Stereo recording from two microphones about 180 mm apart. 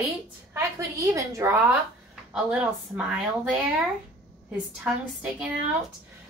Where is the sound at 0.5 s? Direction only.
20° right (ahead or behind).